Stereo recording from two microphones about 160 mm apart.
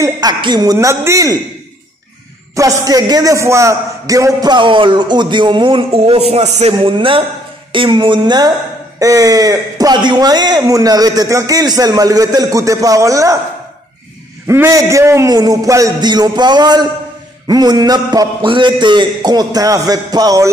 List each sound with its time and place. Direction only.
0.0 s speech: 25° right (ahead or behind)
2.5 s speech: 20° right (ahead or behind); by 6.7 s 45° right (ahead or behind)
6.7 s a man's voice: 30° right (ahead or behind)
14.5 s speech: 20° right (ahead or behind)